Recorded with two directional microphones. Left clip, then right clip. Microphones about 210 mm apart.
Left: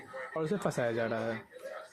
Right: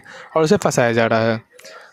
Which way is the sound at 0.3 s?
50° right (ahead or behind).